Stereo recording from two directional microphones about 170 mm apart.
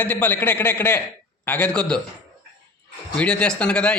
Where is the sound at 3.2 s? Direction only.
5° left (ahead or behind).